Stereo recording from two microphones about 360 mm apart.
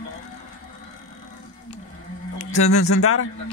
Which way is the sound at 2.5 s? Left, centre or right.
Left.